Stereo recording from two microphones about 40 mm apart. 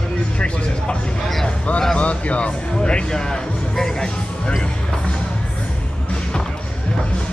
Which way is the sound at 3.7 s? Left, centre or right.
Centre.